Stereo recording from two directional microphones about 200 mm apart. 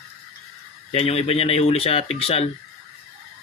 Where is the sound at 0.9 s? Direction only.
30° left (ahead or behind).